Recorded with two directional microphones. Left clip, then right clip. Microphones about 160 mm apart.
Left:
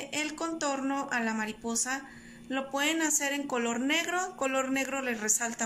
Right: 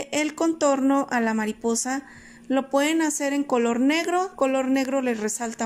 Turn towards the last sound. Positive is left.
turn(degrees=-35)  # may be behind; listen again after turning